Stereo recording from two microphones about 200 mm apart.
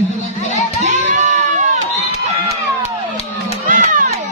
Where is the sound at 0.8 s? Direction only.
35° right (ahead or behind).